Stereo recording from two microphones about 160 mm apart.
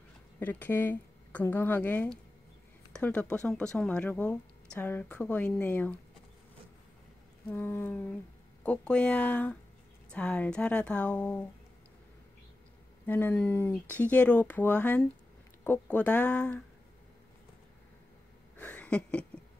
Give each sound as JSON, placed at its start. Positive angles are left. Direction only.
{"t": 0.4, "sound": "speech", "side_deg": 10}
{"t": 7.5, "sound": "speech", "side_deg": 10}
{"t": 13.0, "sound": "speech", "side_deg": 10}
{"t": 18.6, "sound": "a sound", "side_deg": 10}